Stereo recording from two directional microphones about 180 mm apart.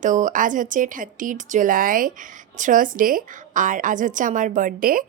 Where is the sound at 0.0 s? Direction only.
45° right (ahead or behind).